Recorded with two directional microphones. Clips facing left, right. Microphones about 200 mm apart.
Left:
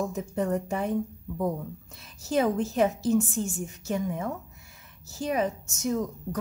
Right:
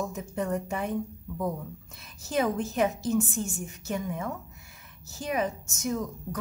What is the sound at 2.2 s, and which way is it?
A woman's voice, 30° left (ahead or behind).